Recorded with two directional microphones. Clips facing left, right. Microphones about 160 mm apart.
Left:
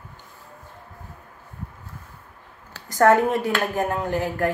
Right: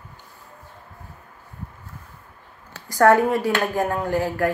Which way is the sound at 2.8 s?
20° left (ahead or behind).